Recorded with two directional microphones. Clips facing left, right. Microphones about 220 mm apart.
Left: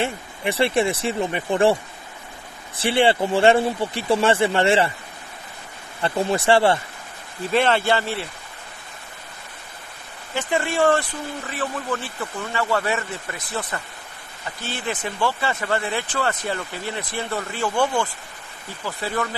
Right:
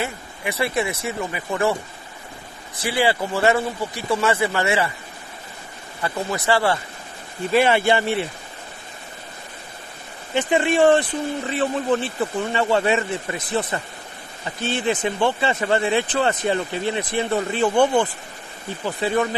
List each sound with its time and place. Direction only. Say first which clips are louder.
0.0 s speech: left 3 dB; 30° left (ahead or behind)
2.8 s speech: left 3 dB; 25° left (ahead or behind)
6.0 s speech: left 3 dB; 30° left (ahead or behind)
7.5 s speech: right 2 dB; 10° right (ahead or behind)
10.3 s speech: right 4 dB; 20° right (ahead or behind)